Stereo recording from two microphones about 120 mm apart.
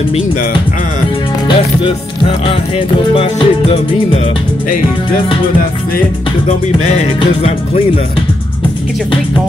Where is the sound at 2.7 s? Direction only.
50° left (ahead or behind).